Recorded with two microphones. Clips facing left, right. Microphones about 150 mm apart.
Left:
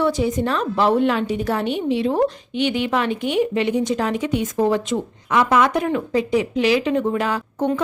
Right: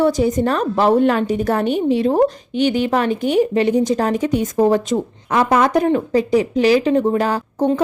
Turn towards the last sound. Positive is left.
turn(degrees=-40)  # may be behind; listen again after turning